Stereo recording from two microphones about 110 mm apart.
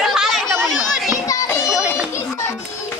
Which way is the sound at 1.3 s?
30° left (ahead or behind).